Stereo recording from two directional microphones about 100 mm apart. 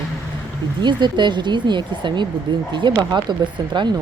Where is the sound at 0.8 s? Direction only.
50° right (ahead or behind).